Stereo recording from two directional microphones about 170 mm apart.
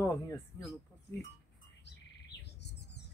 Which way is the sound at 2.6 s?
85° left.